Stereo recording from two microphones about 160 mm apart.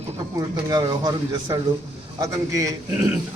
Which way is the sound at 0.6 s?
25° right (ahead or behind).